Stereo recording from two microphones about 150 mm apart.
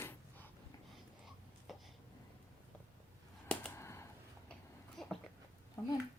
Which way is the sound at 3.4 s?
10° left (ahead or behind).